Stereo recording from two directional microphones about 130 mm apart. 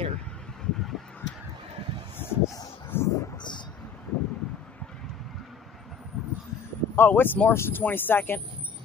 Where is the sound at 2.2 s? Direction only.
20° left (ahead or behind).